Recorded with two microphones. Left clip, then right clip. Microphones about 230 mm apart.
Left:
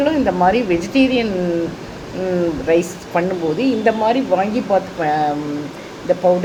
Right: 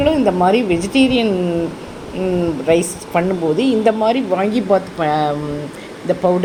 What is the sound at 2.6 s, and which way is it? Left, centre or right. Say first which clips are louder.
A woman's voice: right 3 dB; right.